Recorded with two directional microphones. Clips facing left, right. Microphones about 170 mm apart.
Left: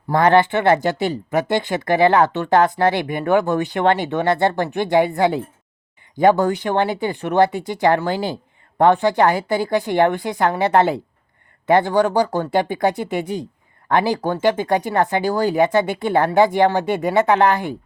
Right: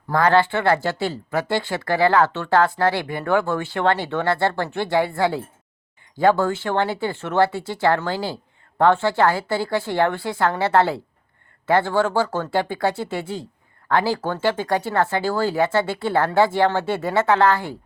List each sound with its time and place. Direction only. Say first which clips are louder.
0.1 s speech: left 3 dB; 20° left (ahead or behind)